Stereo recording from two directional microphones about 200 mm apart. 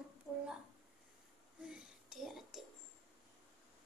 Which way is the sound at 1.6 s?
5° right (ahead or behind).